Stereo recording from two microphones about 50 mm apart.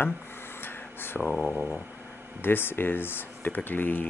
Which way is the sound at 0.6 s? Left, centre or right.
Left.